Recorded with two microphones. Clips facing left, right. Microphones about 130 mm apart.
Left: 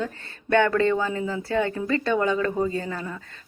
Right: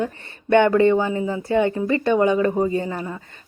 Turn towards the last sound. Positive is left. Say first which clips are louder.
# right 5 dB
turn(degrees=-25)  # may be behind; listen again after turning